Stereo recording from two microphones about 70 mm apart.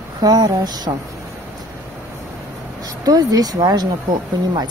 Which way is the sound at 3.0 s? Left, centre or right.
Right.